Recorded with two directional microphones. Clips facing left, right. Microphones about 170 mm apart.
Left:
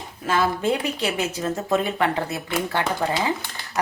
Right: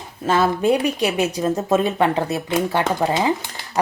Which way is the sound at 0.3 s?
25° right (ahead or behind).